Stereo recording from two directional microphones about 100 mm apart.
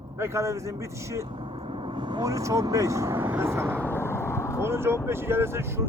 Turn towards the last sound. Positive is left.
turn(degrees=-25)  # may be behind; listen again after turning